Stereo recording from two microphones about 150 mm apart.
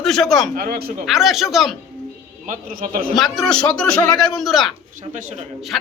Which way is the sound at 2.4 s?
65° right (ahead or behind).